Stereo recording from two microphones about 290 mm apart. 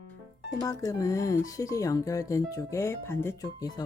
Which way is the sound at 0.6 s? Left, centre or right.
Centre.